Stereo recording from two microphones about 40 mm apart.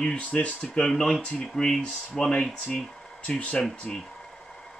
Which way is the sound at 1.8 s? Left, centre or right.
Left.